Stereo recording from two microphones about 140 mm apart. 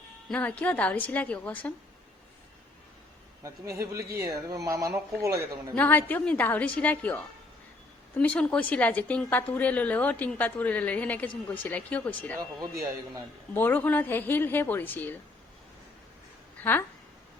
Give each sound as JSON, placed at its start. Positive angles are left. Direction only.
{"t": 0.3, "sound": "a woman's voice", "side_deg": 10}
{"t": 3.9, "sound": "a man's voice", "side_deg": -25}
{"t": 5.7, "sound": "a woman's voice", "side_deg": 15}
{"t": 8.2, "sound": "a woman's voice", "side_deg": 10}
{"t": 13.5, "sound": "a woman's voice", "side_deg": 15}
{"t": 16.6, "sound": "speech", "side_deg": 15}